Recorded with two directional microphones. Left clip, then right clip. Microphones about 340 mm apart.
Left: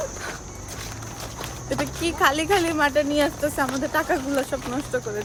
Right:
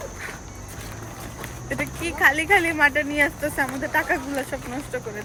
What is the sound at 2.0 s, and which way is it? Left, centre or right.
Speech, centre.